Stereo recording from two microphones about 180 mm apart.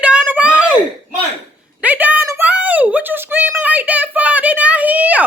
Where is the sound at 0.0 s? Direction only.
5° right (ahead or behind).